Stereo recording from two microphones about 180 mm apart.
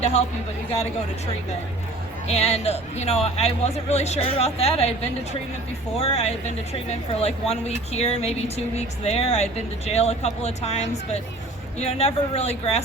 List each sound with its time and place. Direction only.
2.2 s speech: 35° left (ahead or behind)
6.0 s speech: 35° left (ahead or behind)